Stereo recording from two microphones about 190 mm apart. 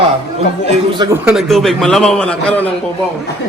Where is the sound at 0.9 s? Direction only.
20° right (ahead or behind).